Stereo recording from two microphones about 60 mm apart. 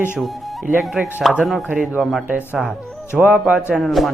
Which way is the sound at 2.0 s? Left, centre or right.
Centre.